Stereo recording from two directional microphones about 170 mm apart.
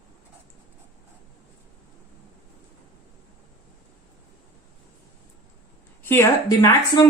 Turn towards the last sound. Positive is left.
turn(degrees=20)  # may be behind; listen again after turning